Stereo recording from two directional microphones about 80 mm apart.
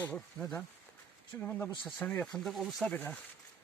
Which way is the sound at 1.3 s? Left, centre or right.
Left.